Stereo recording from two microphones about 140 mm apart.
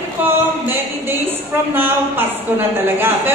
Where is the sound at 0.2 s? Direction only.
15° right (ahead or behind).